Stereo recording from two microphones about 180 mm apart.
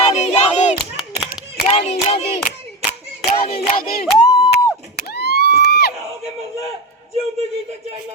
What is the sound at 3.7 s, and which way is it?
Speech, 55° left (ahead or behind).